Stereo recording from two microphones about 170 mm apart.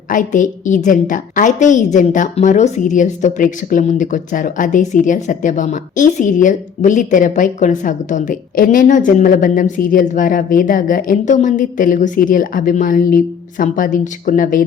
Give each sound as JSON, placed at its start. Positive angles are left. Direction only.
{"t": 0.1, "sound": "a woman's voice", "side_deg": 50}